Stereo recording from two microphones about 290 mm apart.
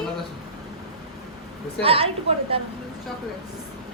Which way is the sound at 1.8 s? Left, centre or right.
Centre.